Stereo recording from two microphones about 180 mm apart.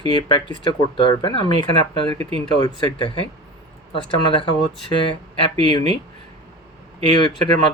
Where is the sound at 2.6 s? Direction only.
25° left (ahead or behind).